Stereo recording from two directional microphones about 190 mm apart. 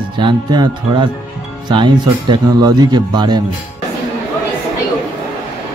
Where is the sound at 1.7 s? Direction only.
25° right (ahead or behind).